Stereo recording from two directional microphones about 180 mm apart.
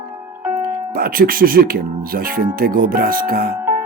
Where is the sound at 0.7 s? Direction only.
55° right (ahead or behind).